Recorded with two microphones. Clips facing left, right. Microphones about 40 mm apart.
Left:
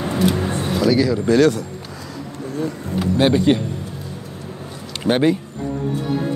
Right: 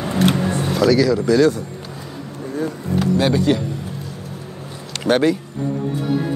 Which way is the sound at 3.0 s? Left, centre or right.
Left.